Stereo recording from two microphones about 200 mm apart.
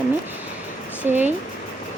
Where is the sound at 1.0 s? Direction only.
10° right (ahead or behind).